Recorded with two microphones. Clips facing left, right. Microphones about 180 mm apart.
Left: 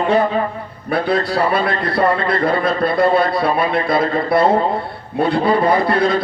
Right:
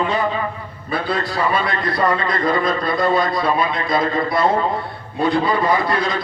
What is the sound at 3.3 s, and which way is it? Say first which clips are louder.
Speech: left 2 dB; 30° left (ahead or behind).